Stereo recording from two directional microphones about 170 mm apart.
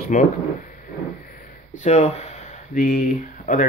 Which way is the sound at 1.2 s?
55° left (ahead or behind).